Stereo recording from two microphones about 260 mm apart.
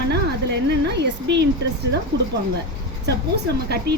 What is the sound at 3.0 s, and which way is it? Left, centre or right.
Speech, right.